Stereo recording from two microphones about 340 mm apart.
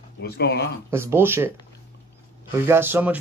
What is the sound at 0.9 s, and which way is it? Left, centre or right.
Speech, centre.